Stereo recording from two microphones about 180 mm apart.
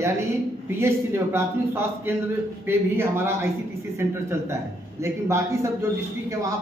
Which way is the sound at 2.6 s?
15° right (ahead or behind).